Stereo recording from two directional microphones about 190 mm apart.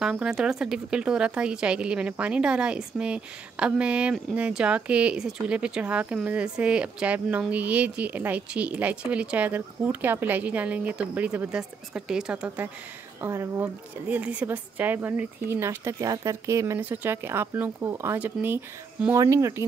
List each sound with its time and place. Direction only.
0.0 s speech: centre (ahead or behind)